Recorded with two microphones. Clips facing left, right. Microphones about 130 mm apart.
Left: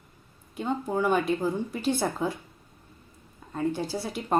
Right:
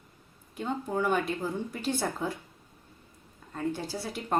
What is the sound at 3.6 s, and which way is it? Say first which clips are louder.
Speech: left 4 dB; 15° left (ahead or behind).